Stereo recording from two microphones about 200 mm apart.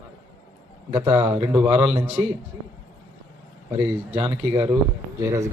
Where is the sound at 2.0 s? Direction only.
10° right (ahead or behind).